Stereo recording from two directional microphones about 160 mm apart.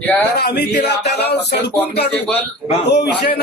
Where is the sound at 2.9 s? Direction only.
90° left.